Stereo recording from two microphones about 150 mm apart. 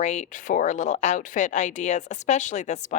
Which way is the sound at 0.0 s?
50° left (ahead or behind).